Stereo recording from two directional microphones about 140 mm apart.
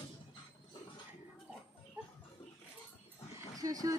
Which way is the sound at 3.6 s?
25° right (ahead or behind).